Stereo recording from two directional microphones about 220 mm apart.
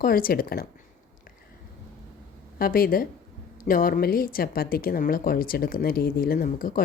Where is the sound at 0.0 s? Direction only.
40° left (ahead or behind).